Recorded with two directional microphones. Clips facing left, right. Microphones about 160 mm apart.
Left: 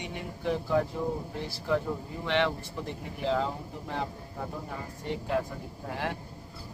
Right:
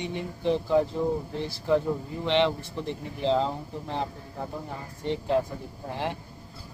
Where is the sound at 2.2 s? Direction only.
25° right (ahead or behind).